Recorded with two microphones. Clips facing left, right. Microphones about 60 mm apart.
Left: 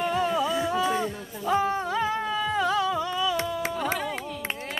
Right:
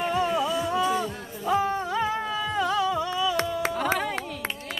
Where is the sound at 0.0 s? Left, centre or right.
Centre.